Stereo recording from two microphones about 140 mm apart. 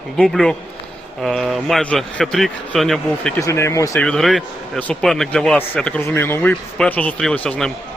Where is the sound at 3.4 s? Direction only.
20° left (ahead or behind).